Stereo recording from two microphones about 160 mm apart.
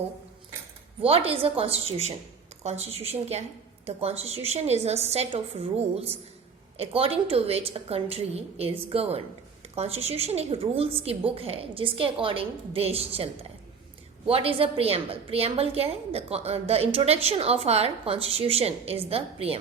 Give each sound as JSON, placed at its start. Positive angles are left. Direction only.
{"t": 1.0, "sound": "a woman's voice", "side_deg": -35}